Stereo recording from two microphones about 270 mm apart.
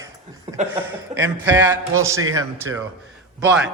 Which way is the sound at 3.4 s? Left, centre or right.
Centre.